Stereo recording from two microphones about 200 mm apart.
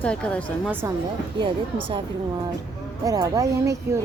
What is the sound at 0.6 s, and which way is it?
Speech, 10° right (ahead or behind).